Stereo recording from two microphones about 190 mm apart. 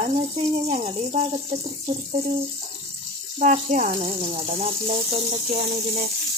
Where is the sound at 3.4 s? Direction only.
40° right (ahead or behind).